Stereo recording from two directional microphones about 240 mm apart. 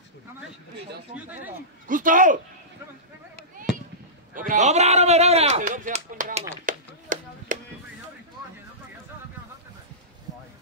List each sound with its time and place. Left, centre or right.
1.9 s a man's voice: right
4.5 s speech: right
6.6 s music: right